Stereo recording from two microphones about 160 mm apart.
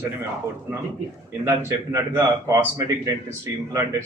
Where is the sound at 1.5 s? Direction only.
20° right (ahead or behind).